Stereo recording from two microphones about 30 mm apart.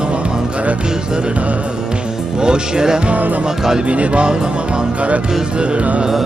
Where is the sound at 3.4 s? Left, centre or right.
Right.